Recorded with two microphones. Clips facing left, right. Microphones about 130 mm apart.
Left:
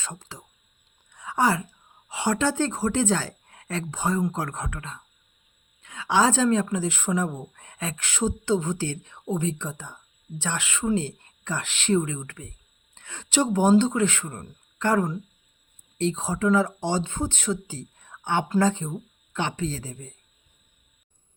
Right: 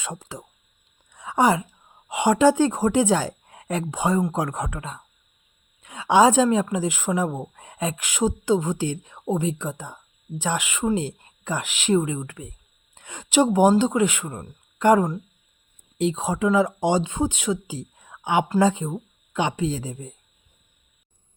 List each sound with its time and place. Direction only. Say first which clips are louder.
0.0 s speech: right 5 dB; 20° right (ahead or behind)
1.1 s a sound: right 4 dB; 20° right (ahead or behind)
2.0 s a woman's voice: right 7 dB; 15° right (ahead or behind)